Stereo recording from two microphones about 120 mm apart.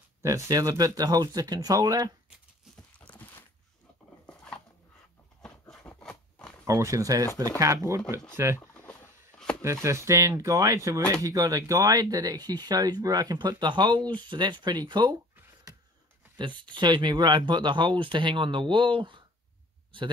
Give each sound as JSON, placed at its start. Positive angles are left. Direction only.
{"t": 0.2, "sound": "speech", "side_deg": -25}
{"t": 2.7, "sound": "horse", "side_deg": 10}
{"t": 5.4, "sound": "a sound", "side_deg": 5}
{"t": 6.6, "sound": "speech", "side_deg": -25}
{"t": 8.5, "sound": "a sound", "side_deg": 15}
{"t": 9.6, "sound": "speech", "side_deg": -25}
{"t": 16.3, "sound": "speech", "side_deg": -40}